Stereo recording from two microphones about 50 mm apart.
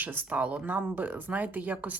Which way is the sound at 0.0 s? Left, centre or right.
Right.